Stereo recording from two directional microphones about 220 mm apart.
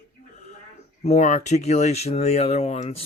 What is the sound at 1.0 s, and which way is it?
Speech, 30° left (ahead or behind).